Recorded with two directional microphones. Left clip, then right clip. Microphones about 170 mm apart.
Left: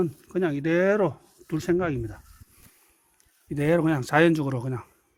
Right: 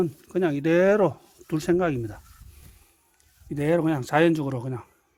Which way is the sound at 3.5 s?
10° right (ahead or behind).